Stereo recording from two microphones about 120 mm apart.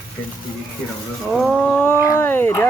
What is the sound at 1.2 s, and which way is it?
Wild animals, centre (ahead or behind).